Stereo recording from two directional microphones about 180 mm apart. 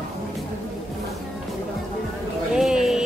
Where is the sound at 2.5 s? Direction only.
Centre (ahead or behind).